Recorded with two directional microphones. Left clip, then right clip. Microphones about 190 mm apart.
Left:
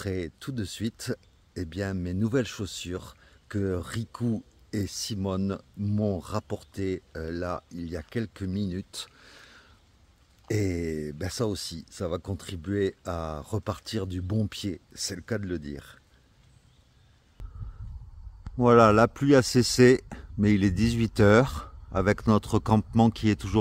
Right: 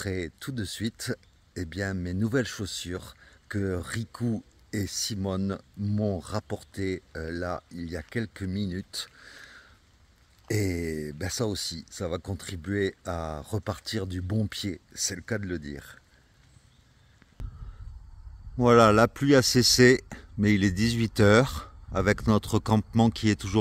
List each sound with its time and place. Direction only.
0.0 s speech: centre (ahead or behind)
17.4 s a sound: centre (ahead or behind)
18.6 s speech: 5° left (ahead or behind)